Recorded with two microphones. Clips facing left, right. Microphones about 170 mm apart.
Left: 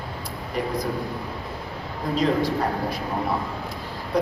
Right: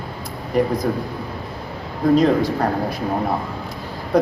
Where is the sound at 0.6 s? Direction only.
45° right (ahead or behind).